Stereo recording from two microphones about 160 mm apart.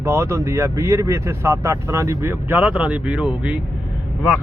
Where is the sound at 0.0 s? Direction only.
15° right (ahead or behind).